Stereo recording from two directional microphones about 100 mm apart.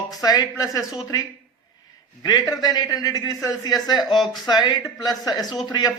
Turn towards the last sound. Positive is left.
turn(degrees=45)  # may be behind; listen again after turning